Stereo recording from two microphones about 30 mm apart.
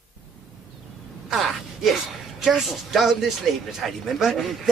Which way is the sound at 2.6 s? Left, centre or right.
Centre.